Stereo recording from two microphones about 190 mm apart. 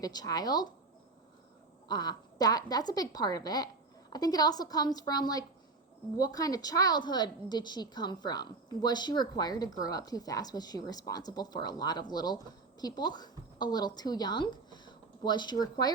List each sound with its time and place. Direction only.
0.0 s a woman's voice: 20° left (ahead or behind)
1.9 s a woman's voice: 20° left (ahead or behind)